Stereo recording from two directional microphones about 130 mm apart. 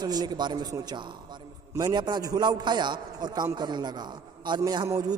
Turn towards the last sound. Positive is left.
turn(degrees=-25)  # may be behind; listen again after turning